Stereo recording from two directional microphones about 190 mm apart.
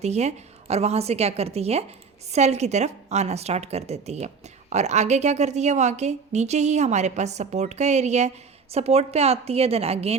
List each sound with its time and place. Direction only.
0.0 s a woman's voice: 35° right (ahead or behind)